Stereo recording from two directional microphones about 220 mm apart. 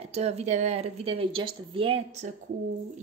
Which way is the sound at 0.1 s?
30° right (ahead or behind).